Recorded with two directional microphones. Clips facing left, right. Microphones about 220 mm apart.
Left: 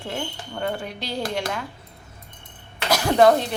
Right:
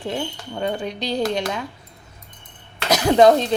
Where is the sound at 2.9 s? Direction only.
20° right (ahead or behind).